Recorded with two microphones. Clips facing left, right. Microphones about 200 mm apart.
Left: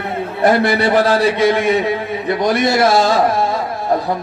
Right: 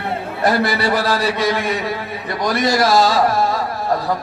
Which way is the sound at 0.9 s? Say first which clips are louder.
Left 6 dB; 50° left (ahead or behind).